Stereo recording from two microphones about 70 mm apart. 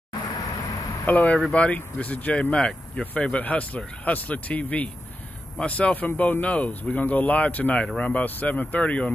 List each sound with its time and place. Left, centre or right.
1.0 s speech: left